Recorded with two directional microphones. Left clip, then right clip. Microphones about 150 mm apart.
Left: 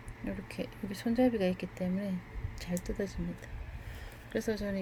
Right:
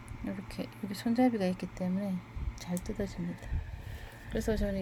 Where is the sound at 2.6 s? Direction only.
Centre (ahead or behind).